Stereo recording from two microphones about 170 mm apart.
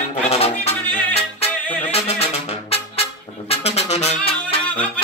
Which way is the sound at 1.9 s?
35° left (ahead or behind).